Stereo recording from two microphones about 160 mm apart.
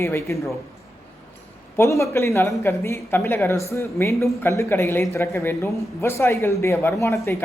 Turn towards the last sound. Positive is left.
turn(degrees=20)  # may be behind; listen again after turning